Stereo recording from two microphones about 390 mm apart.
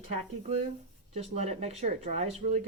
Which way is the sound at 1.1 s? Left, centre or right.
Centre.